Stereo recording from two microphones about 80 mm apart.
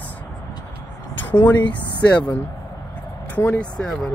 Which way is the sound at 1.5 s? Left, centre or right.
Left.